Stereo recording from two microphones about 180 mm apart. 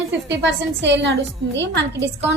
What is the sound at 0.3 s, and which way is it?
A woman's voice, 80° right.